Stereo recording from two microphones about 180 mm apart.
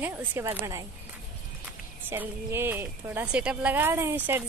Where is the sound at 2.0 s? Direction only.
10° right (ahead or behind).